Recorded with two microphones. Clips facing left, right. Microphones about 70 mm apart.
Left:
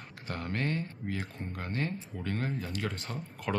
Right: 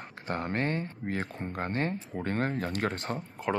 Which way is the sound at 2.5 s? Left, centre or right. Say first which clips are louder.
Right 5 dB; right.